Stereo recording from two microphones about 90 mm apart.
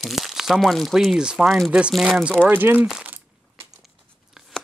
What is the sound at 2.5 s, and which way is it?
Speech, 25° right (ahead or behind).